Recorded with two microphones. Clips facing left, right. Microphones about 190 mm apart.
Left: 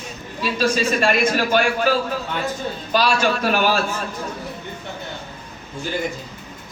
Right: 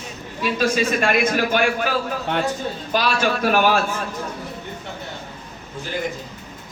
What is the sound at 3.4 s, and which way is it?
Speech, 50° right (ahead or behind).